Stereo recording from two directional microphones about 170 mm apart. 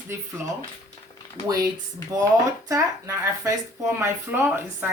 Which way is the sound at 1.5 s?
20° right (ahead or behind).